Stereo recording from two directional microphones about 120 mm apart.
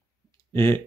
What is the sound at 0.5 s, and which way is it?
Speech, 20° left (ahead or behind).